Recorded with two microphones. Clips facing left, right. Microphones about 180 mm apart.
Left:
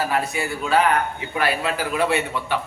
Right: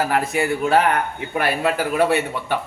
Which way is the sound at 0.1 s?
55° right (ahead or behind).